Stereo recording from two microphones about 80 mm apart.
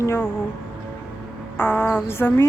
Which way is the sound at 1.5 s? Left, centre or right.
Left.